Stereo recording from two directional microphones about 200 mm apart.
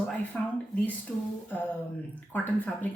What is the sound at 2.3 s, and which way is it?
Speech, 10° left (ahead or behind).